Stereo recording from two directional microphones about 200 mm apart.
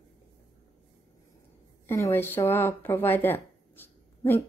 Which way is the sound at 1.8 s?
15° left (ahead or behind).